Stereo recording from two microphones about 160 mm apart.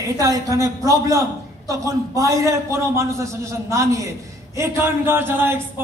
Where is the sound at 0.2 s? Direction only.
20° right (ahead or behind).